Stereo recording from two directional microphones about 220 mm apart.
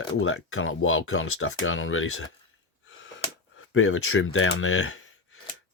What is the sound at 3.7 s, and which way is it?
Speech, 65° left (ahead or behind).